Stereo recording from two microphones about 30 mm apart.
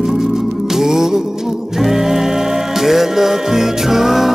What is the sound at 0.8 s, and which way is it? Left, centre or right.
Music, centre.